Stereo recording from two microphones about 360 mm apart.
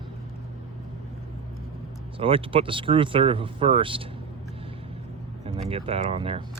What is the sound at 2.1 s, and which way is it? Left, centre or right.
Speech, centre.